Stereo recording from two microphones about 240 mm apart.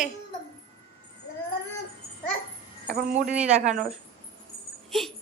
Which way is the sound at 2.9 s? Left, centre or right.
Right.